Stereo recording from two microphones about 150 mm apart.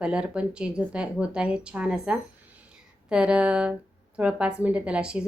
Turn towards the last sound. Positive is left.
turn(degrees=-5)  # may be behind; listen again after turning